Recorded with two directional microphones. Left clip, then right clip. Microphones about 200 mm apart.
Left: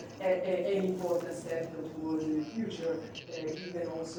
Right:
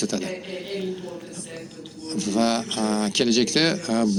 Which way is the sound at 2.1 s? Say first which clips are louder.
Right 12 dB; 60° right (ahead or behind).